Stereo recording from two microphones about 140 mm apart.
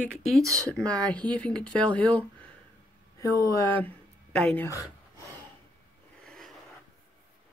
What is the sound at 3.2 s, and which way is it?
Speech, 25° left (ahead or behind).